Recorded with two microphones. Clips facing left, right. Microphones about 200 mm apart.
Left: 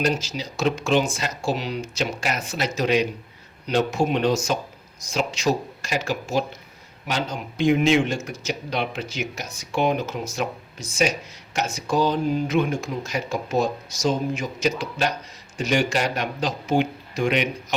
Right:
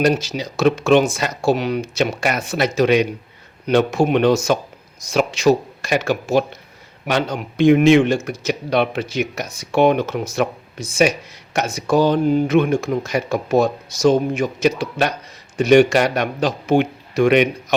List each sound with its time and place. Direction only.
0.1 s speech: 60° right (ahead or behind)
11.5 s speech: 65° right (ahead or behind)